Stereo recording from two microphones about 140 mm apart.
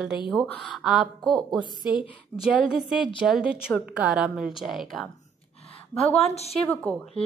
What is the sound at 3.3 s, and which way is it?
A woman's voice, 5° right (ahead or behind).